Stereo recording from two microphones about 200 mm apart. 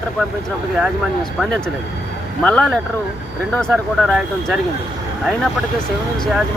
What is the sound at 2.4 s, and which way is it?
Speech, 5° left (ahead or behind).